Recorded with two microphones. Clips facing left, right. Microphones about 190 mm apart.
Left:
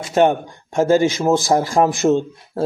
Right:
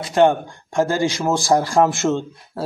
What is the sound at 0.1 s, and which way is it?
Speech, 20° left (ahead or behind).